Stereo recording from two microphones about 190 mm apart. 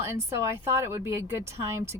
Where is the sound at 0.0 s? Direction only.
15° right (ahead or behind).